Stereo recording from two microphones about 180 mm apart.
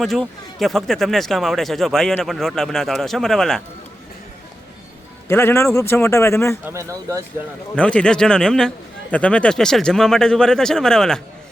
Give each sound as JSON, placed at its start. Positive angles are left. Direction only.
{"t": 0.0, "sound": "speech", "side_deg": 0}
{"t": 5.3, "sound": "speech", "side_deg": 15}
{"t": 6.7, "sound": "speech", "side_deg": -15}
{"t": 7.8, "sound": "speech", "side_deg": 5}